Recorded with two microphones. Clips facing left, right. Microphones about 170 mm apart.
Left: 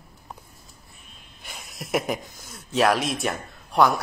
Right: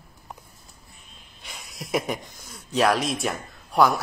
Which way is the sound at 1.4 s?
Centre (ahead or behind).